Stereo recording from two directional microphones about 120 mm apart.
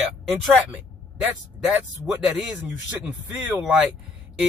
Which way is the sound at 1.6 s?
10° right (ahead or behind).